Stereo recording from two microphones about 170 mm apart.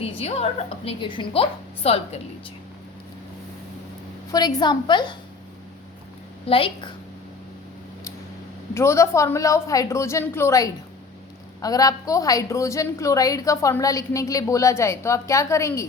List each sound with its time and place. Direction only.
0.0 s a woman's voice: 35° left (ahead or behind)
4.3 s a woman's voice: 25° left (ahead or behind)
6.4 s a woman's voice: 30° left (ahead or behind)
8.7 s a woman's voice: 15° left (ahead or behind)